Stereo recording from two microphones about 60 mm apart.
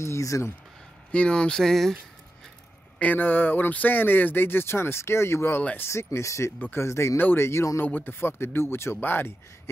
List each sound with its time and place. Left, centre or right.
0.0 s speech: left
1.1 s speech: centre
3.0 s speech: left
5.6 s speech: left
5.9 s speech: left
7.8 s speech: left